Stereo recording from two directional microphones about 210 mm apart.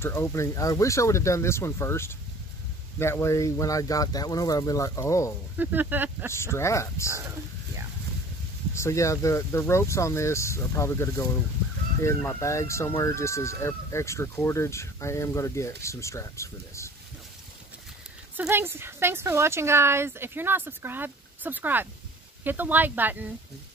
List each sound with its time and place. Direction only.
0.0 s speech: 10° left (ahead or behind)
5.6 s speech: 10° right (ahead or behind)
6.3 s speech: 10° left (ahead or behind)
8.7 s speech: 15° left (ahead or behind)
18.3 s speech: 10° right (ahead or behind)